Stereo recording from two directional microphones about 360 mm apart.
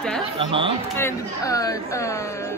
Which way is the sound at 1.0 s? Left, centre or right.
Centre.